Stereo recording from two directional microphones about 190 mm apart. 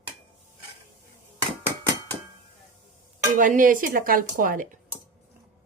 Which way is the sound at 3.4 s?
45° right (ahead or behind).